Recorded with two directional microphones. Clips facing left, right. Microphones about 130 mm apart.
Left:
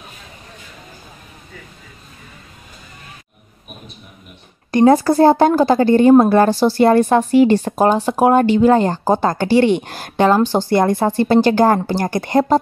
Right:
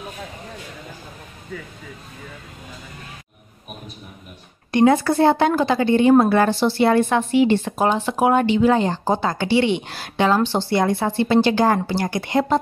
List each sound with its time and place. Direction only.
4.6 s a woman's voice: 40° left (ahead or behind)